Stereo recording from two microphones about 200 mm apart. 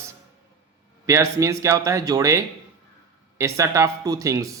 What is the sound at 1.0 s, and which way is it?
A man's voice, 15° right (ahead or behind).